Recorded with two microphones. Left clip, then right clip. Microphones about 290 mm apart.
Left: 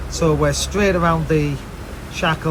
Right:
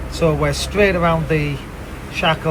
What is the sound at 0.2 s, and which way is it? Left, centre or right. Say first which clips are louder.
Speech: even; centre.